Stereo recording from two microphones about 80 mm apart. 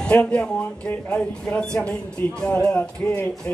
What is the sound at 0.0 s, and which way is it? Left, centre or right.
Speech, centre.